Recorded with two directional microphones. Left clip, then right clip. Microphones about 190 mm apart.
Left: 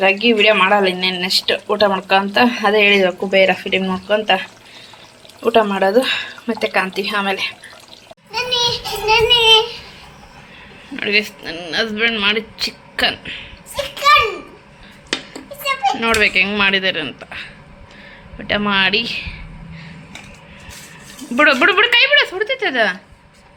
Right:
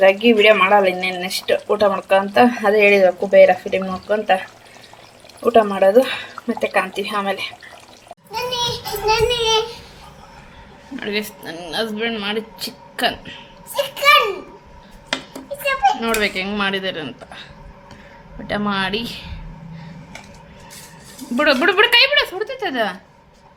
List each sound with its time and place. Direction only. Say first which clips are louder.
0.0 s speech: right 1 dB; 5° right (ahead or behind)
8.3 s a sound: left 4 dB; 30° right (ahead or behind)
9.0 s child singing: left 6 dB; 40° right (ahead or behind)
10.9 s speech: left 7 dB; centre (ahead or behind)
15.6 s children playing: right 1 dB; 25° right (ahead or behind)
16.0 s speech: left 6 dB; centre (ahead or behind)
21.3 s speech: left 3 dB; centre (ahead or behind)